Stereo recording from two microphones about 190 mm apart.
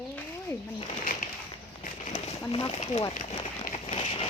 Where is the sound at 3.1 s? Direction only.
35° left (ahead or behind).